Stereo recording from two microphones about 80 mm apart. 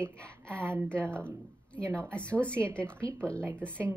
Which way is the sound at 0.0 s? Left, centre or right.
Centre.